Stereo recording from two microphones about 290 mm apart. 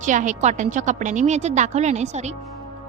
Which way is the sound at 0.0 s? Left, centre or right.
Right.